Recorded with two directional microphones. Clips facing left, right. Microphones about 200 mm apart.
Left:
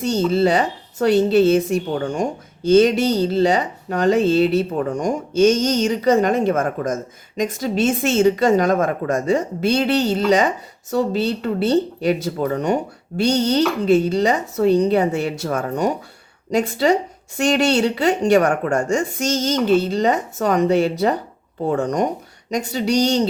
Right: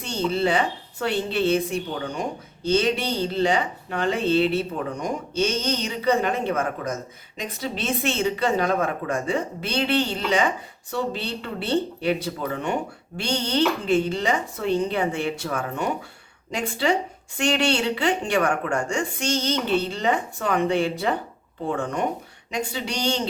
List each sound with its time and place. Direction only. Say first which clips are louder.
0.0 s speech: left 7 dB; 40° left (ahead or behind)